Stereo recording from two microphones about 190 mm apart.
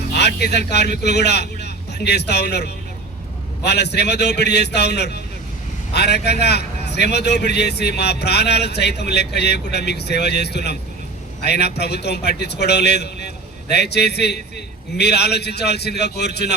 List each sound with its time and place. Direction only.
0.2 s a man's voice: 60° left (ahead or behind)